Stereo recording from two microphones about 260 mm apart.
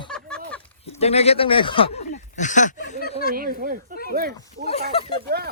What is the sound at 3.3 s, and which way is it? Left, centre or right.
Speech, right.